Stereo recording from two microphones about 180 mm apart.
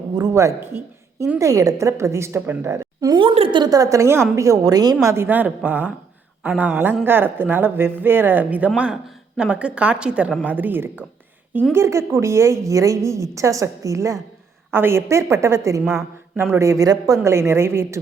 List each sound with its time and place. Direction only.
0.1 s a woman's voice: 20° right (ahead or behind)